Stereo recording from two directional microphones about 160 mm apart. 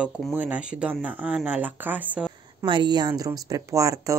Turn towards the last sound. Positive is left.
turn(degrees=-20)  # may be behind; listen again after turning